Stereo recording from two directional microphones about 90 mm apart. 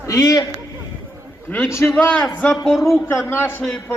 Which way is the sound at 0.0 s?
40° left (ahead or behind).